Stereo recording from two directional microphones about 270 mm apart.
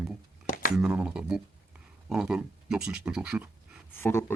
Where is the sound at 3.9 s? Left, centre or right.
Centre.